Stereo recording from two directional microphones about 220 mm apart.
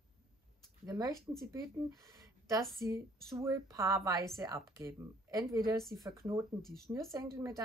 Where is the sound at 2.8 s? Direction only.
15° right (ahead or behind).